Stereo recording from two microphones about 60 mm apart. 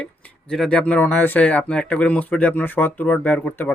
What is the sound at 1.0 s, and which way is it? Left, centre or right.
Speech, left.